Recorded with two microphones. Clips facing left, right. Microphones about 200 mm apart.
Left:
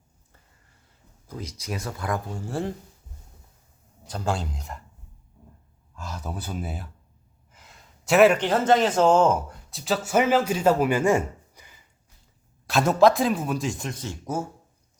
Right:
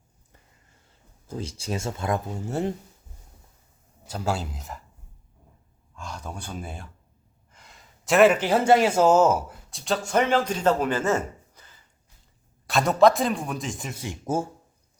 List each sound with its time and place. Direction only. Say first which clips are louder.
1.3 s speech: right 3 dB; 30° right (ahead or behind)
4.0 s speech: even; 5° right (ahead or behind)
6.0 s speech: left 2 dB; 5° left (ahead or behind)
12.6 s a man's voice: even; centre (ahead or behind)